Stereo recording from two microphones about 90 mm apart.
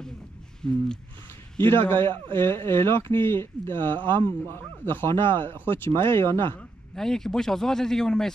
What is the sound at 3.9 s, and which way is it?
Speech, 60° right (ahead or behind).